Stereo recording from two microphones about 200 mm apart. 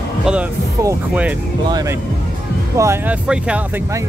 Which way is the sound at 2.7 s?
15° right (ahead or behind).